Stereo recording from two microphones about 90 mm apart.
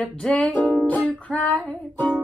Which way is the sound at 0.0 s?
10° left (ahead or behind).